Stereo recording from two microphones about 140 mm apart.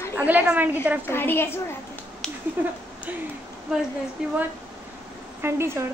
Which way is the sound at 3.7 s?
5° right (ahead or behind).